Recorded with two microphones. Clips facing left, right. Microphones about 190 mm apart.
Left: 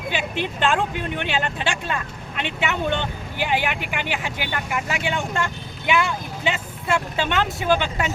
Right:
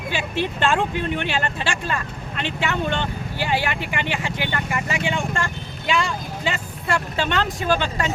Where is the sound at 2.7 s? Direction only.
15° left (ahead or behind).